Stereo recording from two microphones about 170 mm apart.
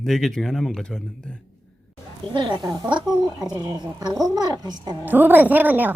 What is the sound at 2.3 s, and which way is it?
Speech, 25° right (ahead or behind).